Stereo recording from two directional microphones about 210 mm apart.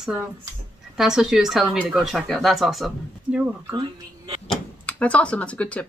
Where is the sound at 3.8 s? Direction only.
20° right (ahead or behind).